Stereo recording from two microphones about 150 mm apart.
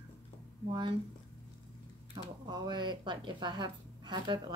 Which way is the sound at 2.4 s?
30° right (ahead or behind).